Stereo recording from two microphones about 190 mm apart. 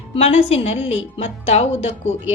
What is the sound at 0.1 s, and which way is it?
A woman's voice, 35° left (ahead or behind).